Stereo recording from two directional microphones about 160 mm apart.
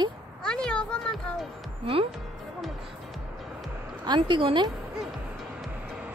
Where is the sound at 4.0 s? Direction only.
30° right (ahead or behind).